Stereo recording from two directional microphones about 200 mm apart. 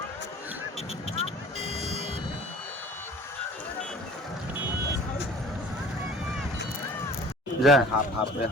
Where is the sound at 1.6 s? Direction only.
35° right (ahead or behind).